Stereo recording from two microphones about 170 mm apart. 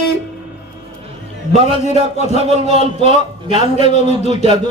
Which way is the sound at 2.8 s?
45° left (ahead or behind).